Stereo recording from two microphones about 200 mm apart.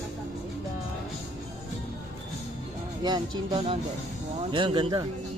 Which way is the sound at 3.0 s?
20° right (ahead or behind).